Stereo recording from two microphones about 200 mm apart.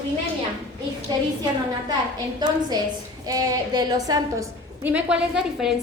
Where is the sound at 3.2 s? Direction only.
20° right (ahead or behind).